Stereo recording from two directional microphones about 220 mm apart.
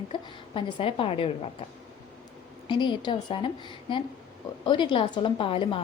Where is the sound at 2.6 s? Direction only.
20° left (ahead or behind).